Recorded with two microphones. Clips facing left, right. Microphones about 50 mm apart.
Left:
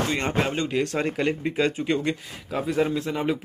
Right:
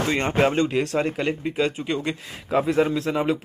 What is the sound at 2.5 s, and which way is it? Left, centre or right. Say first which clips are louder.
Speech: right 6 dB; right.